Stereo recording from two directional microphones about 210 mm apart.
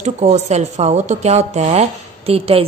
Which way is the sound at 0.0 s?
30° right (ahead or behind).